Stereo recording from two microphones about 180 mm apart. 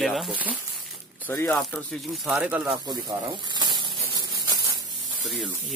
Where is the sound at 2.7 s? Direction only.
25° right (ahead or behind).